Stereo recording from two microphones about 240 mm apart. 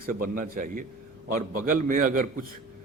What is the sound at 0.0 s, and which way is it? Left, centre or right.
A man's voice, right.